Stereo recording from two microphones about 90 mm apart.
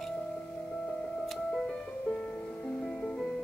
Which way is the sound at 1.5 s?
10° left (ahead or behind).